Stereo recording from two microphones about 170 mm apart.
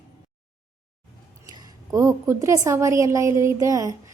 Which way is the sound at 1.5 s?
20° right (ahead or behind).